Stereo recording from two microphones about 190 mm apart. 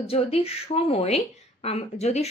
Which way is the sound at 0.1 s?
30° left (ahead or behind).